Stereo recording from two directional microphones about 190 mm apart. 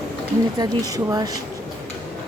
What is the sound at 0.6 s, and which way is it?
Speech, 20° right (ahead or behind).